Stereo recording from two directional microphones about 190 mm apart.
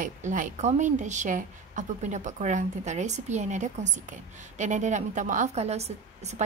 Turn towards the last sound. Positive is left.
turn(degrees=-35)  # may be behind; listen again after turning